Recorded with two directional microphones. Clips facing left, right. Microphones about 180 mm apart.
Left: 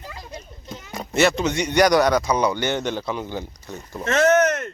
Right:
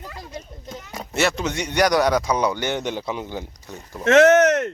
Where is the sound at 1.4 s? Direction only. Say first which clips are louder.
Left 3 dB; 5° right (ahead or behind).